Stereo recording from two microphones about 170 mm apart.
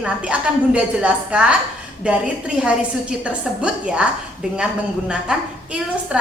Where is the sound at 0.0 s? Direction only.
5° right (ahead or behind).